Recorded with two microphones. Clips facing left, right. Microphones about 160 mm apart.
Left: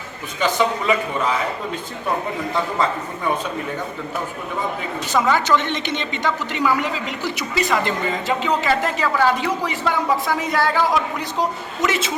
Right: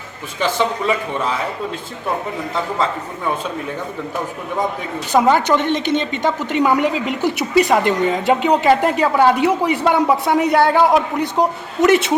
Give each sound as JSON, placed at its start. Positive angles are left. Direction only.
{"t": 5.1, "sound": "a woman's voice", "side_deg": -55}